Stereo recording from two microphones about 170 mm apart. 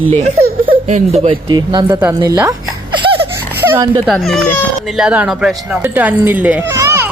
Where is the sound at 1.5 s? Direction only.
25° right (ahead or behind).